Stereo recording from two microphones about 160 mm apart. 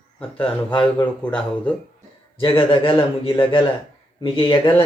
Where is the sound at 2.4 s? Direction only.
30° left (ahead or behind).